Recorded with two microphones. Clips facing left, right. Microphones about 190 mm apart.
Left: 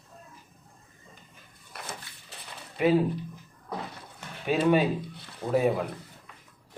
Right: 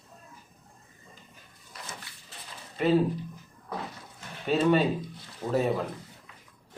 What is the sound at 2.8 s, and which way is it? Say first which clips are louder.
Speech: left 2 dB; 10° left (ahead or behind).